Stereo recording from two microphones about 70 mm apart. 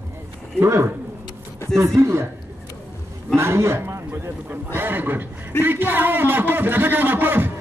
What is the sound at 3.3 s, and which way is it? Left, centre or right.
A man's voice, right.